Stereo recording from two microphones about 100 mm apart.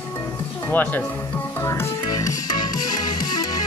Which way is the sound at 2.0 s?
40° left (ahead or behind).